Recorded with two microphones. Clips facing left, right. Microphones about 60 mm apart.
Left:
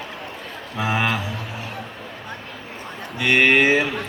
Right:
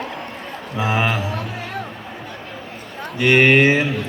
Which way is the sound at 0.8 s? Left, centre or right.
Right.